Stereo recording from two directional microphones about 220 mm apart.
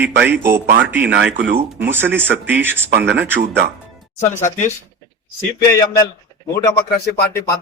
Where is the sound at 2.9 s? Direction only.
50° right (ahead or behind).